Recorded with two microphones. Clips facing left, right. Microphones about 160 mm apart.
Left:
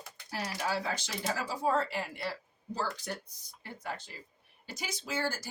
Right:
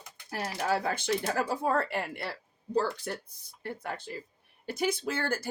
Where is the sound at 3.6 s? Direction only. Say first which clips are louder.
Right 4 dB; 55° right (ahead or behind).